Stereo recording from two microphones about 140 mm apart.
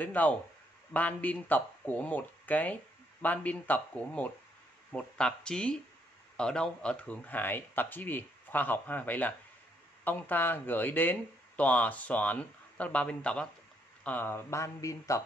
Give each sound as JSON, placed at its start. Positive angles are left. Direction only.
{"t": 0.0, "sound": "speech", "side_deg": 10}